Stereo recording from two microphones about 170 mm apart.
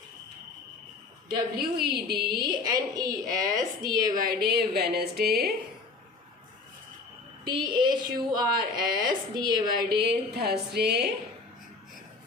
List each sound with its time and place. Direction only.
1.5 s a woman's voice: 65° right (ahead or behind)
2.4 s a woman's voice: 25° right (ahead or behind)
4.1 s a woman's voice: 60° right (ahead or behind)
7.4 s a woman's voice: 25° right (ahead or behind)
9.9 s a woman's voice: 70° right (ahead or behind)